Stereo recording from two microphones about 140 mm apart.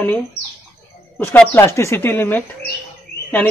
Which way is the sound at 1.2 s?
15° left (ahead or behind).